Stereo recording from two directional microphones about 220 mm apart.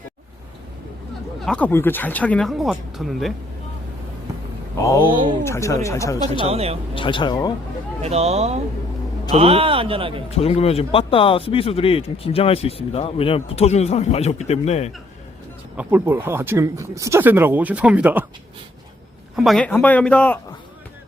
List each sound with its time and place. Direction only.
1.5 s speech: 5° left (ahead or behind)
4.8 s speech: 15° left (ahead or behind)
6.5 s speech: 25° right (ahead or behind)
6.9 s speech: 25° left (ahead or behind)
8.0 s speech: 30° right (ahead or behind)
10.2 s speech: 25° left (ahead or behind)
15.7 s speech: 5° right (ahead or behind)
19.4 s speech: centre (ahead or behind)